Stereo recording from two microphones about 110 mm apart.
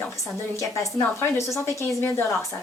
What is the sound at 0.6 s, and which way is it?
Speech, 25° left (ahead or behind).